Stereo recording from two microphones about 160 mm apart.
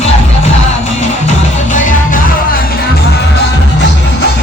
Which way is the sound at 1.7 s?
55° left (ahead or behind).